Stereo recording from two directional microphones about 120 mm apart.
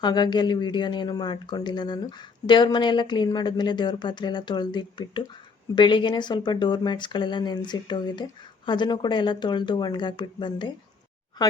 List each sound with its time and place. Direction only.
0.0 s speech: 35° left (ahead or behind)